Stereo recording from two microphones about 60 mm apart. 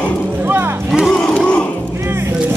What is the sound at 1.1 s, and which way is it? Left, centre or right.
Battle cry, centre.